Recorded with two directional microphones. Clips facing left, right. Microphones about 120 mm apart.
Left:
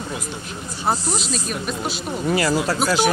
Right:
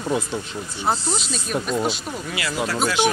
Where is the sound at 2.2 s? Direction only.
40° left (ahead or behind).